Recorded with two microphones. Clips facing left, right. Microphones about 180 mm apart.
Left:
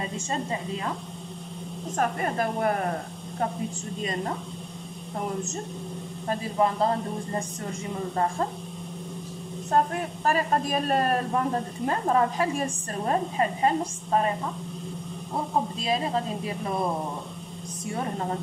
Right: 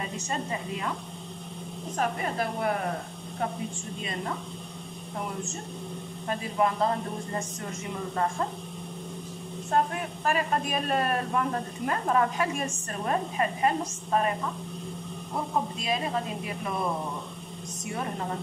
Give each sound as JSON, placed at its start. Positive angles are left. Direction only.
{"t": 2.0, "sound": "speech", "side_deg": 45}
{"t": 6.2, "sound": "speech", "side_deg": 30}
{"t": 10.2, "sound": "a woman's voice", "side_deg": 40}
{"t": 15.8, "sound": "a woman's voice", "side_deg": 30}